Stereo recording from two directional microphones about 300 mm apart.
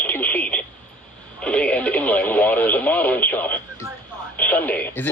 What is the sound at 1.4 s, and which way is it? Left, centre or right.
Radio, centre.